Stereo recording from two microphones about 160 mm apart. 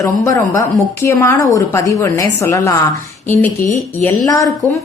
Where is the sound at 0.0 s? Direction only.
20° left (ahead or behind).